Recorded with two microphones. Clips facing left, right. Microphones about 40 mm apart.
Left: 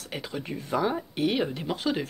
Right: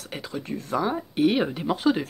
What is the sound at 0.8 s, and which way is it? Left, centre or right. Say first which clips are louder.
Speech: right 5 dB; centre.